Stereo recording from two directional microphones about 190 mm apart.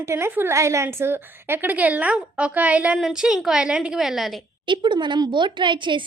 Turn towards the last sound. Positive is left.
turn(degrees=-25)  # may be behind; listen again after turning